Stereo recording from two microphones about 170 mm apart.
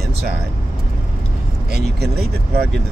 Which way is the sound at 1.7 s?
70° right (ahead or behind).